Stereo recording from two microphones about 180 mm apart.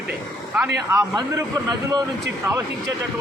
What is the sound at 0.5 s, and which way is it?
A man's voice, 10° right (ahead or behind).